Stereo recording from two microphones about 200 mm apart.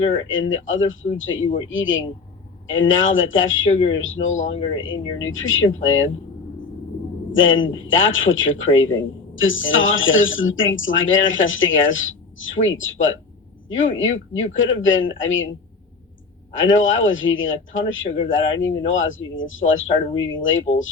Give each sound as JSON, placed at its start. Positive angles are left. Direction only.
{"t": 0.3, "sound": "speech", "side_deg": 75}
{"t": 3.8, "sound": "speech", "side_deg": 25}
{"t": 4.0, "sound": "speech", "side_deg": 75}
{"t": 4.5, "sound": "speech", "side_deg": 30}
{"t": 5.2, "sound": "speech", "side_deg": 75}
{"t": 7.3, "sound": "speech", "side_deg": 75}
{"t": 16.6, "sound": "speech", "side_deg": 75}